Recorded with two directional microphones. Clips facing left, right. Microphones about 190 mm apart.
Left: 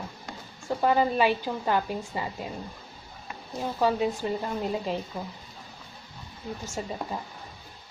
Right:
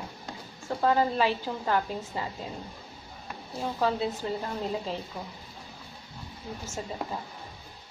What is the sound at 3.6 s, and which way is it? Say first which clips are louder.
A woman's voice: left 3 dB; 15° left (ahead or behind).